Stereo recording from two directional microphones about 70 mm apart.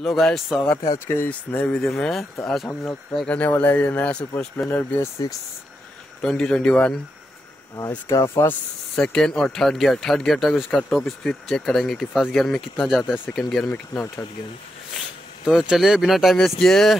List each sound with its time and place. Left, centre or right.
0.0 s speech: centre
0.9 s speech: left
1.3 s speech: centre
1.9 s speech: centre
2.8 s speech: centre
5.2 s speech: left
6.2 s speech: centre
8.1 s speech: left
8.9 s speech: centre
13.9 s speech: left
15.0 s speech: centre